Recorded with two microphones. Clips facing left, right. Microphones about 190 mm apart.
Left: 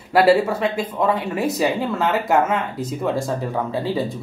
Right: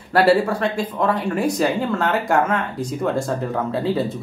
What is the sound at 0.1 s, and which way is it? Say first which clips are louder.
Speech: left 1 dB; 5° left (ahead or behind).